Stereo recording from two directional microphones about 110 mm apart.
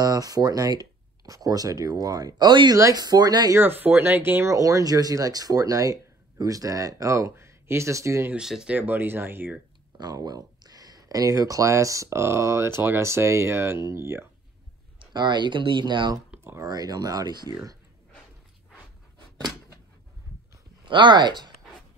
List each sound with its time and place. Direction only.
0.0 s speech: 35° right (ahead or behind)
3.5 s speech: 20° right (ahead or behind)
8.3 s speech: 5° right (ahead or behind)
8.7 s speech: 15° right (ahead or behind)
9.9 s speech: 40° right (ahead or behind)
15.0 s speech: 45° right (ahead or behind)
20.8 s speech: 45° right (ahead or behind)